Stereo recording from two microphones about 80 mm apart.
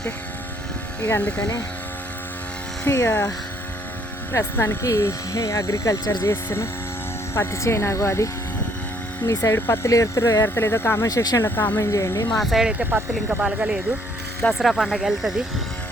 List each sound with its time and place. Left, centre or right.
1.0 s speech: left
1.4 s speech: left
2.9 s speech: left
4.3 s speech: left
9.3 s speech: left
9.6 s speech: left
9.9 s speech: left
11.1 s speech: left
11.3 s speech: left
11.8 s speech: left
12.4 s speech: centre
13.4 s speech: centre
14.6 s speech: centre